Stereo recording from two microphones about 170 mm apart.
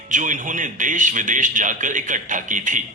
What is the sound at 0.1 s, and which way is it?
A man's voice, 50° right (ahead or behind).